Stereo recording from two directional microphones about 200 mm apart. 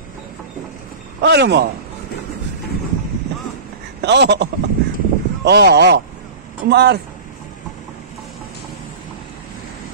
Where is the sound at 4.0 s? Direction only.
55° right (ahead or behind).